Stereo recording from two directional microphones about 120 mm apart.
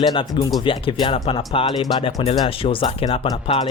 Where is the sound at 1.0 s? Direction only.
45° left (ahead or behind).